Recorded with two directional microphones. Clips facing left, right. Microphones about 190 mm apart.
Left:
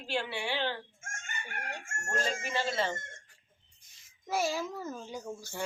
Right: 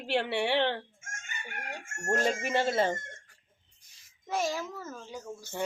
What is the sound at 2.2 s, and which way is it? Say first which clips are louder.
Speech: right 4 dB; 60° right (ahead or behind).